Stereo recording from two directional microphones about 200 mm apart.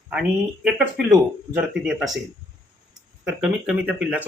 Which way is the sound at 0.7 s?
Centre (ahead or behind).